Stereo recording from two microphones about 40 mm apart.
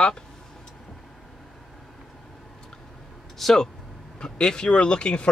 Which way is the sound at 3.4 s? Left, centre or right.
Centre.